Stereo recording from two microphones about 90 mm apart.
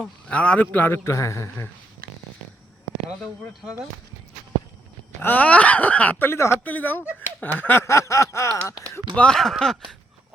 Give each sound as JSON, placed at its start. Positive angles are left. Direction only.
{"t": 0.0, "sound": "a man's voice", "side_deg": 15}
{"t": 5.2, "sound": "speech", "side_deg": 20}
{"t": 6.7, "sound": "a man's voice", "side_deg": 20}
{"t": 7.4, "sound": "snicker", "side_deg": 20}
{"t": 9.1, "sound": "speech", "side_deg": 10}